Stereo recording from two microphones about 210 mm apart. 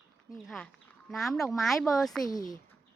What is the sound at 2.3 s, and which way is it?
Speech, 20° left (ahead or behind).